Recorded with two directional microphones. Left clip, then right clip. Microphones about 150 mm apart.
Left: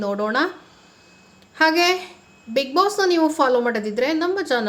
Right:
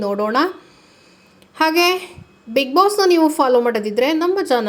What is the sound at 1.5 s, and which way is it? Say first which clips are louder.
A woman's voice: right 2 dB; 25° right (ahead or behind).